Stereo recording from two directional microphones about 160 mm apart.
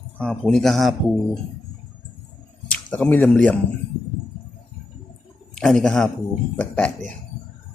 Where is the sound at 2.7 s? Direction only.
10° left (ahead or behind).